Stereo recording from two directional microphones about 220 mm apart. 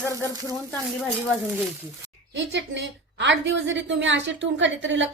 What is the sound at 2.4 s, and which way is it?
A woman's voice, 55° right (ahead or behind).